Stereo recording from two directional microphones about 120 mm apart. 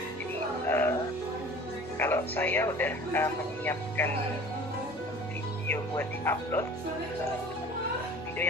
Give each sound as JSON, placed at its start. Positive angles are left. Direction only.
{"t": 0.7, "sound": "music", "side_deg": 20}
{"t": 2.0, "sound": "speech", "side_deg": 20}
{"t": 5.7, "sound": "speech", "side_deg": 20}